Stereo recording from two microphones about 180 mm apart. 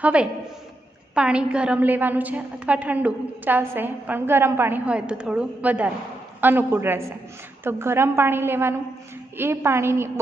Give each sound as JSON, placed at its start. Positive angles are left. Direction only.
{"t": 0.0, "sound": "a woman's voice", "side_deg": -5}